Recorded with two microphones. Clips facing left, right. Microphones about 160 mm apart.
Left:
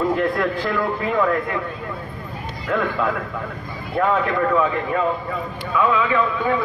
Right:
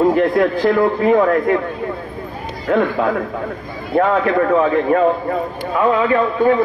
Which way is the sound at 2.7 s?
55° right (ahead or behind).